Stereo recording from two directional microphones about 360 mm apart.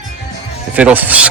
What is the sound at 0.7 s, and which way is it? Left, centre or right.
Speech, centre.